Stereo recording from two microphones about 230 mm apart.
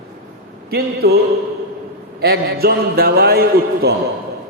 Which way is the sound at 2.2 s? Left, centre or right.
Right.